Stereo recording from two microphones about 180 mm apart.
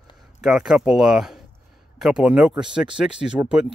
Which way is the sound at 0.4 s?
5° right (ahead or behind).